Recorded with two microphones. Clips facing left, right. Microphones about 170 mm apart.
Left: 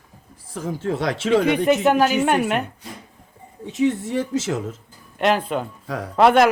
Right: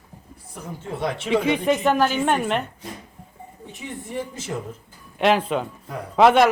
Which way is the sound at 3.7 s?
85° left.